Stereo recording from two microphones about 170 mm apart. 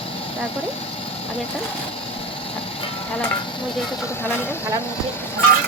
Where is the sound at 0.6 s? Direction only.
35° left (ahead or behind).